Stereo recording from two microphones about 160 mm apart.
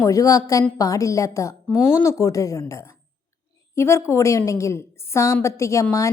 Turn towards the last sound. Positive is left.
turn(degrees=20)  # may be behind; listen again after turning